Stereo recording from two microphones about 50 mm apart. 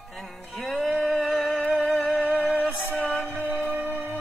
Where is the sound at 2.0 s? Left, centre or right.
Left.